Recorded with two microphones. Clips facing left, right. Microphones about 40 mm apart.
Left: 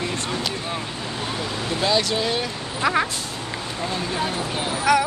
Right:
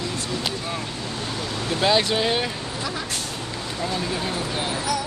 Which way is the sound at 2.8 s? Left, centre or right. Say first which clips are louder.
Left 12 dB; left.